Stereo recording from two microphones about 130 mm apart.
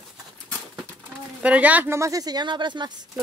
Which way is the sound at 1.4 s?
10° right (ahead or behind).